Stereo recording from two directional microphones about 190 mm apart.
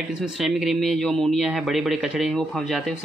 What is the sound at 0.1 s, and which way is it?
Speech, centre (ahead or behind).